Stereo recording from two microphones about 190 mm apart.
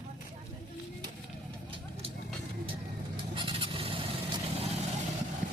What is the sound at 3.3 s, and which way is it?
Fowl, 25° right (ahead or behind).